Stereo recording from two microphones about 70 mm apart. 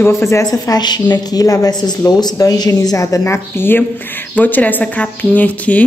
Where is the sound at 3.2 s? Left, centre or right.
Left.